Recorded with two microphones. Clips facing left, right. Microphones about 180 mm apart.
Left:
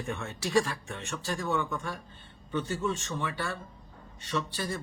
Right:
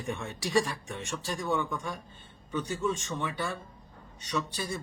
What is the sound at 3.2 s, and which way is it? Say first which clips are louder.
Speech: right 1 dB; 15° right (ahead or behind).